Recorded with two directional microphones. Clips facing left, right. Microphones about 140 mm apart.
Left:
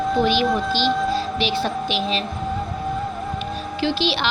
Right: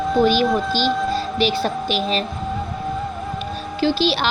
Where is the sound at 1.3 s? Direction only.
40° right (ahead or behind).